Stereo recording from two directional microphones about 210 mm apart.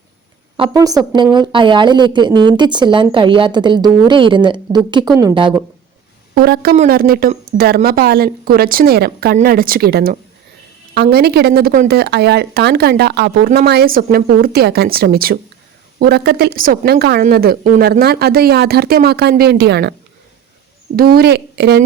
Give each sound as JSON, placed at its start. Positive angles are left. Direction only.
{"t": 0.5, "sound": "a woman's voice", "side_deg": -20}
{"t": 6.3, "sound": "a woman's voice", "side_deg": -45}
{"t": 20.9, "sound": "a woman's voice", "side_deg": -45}